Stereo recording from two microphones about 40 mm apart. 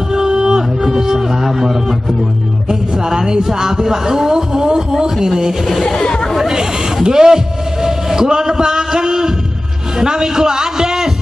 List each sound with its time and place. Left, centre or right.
0.1 s music: centre
0.8 s a sound: centre
2.7 s speech: centre
5.9 s speech: left
6.3 s speech: centre
9.9 s a sound: centre